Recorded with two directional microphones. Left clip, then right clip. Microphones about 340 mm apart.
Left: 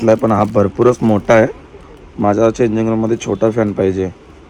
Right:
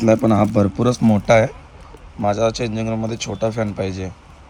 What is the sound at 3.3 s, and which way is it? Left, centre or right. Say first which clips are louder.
Speech: left 10 dB; left.